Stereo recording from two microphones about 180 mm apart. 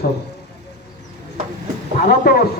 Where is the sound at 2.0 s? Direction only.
55° left (ahead or behind).